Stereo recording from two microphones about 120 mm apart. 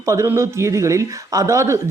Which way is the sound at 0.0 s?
25° right (ahead or behind).